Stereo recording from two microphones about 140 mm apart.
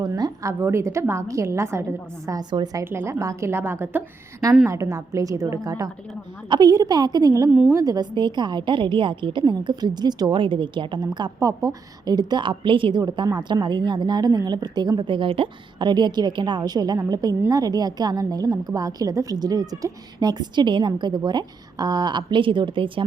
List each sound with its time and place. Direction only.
0.0 s a woman's voice: 25° right (ahead or behind)
2.8 s a woman's voice: 20° right (ahead or behind); by 23.0 s 35° right (ahead or behind)